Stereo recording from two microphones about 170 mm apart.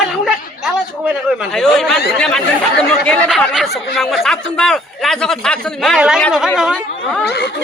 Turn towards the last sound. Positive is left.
turn(degrees=80)